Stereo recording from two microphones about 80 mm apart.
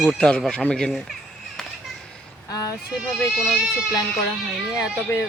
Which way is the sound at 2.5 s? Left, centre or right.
Left.